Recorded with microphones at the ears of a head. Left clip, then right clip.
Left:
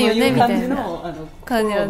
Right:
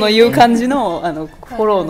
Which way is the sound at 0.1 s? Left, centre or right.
Right.